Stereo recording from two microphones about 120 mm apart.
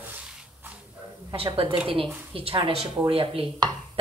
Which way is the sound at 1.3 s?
50° right (ahead or behind).